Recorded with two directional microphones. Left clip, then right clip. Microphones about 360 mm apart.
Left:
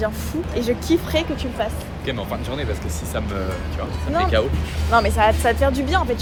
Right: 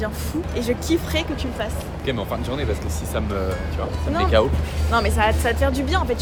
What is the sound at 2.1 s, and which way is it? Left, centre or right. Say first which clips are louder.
Speech: right 1 dB; centre.